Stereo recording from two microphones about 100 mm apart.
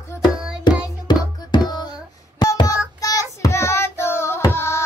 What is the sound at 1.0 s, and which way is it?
Music, 45° left (ahead or behind).